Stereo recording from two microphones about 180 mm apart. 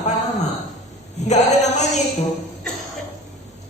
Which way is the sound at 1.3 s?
40° left (ahead or behind).